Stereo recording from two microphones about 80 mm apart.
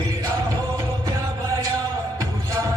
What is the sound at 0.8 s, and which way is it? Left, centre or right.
Music, right.